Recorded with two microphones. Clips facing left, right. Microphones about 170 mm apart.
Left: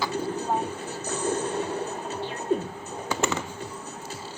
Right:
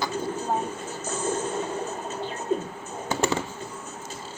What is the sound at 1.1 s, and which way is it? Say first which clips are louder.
Music: left 1 dB; 65° left (ahead or behind).